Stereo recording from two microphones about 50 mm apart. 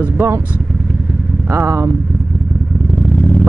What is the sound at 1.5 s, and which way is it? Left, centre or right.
Speech, right.